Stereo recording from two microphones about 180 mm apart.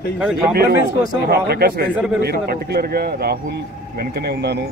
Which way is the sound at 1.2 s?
60° right (ahead or behind).